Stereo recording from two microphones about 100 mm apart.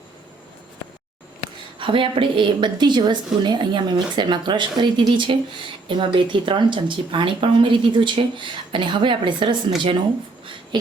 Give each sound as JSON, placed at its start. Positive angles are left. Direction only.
{"t": 1.8, "sound": "a woman's voice", "side_deg": -60}